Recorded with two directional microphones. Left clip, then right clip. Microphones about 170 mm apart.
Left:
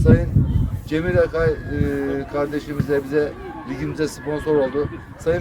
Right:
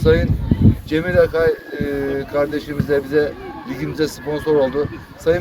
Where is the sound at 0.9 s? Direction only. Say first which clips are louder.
Right 3 dB; centre (ahead or behind).